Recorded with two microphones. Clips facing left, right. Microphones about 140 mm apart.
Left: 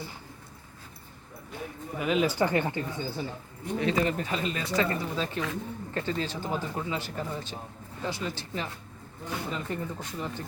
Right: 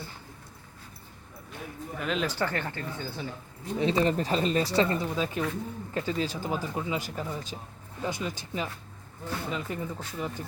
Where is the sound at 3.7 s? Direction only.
25° right (ahead or behind).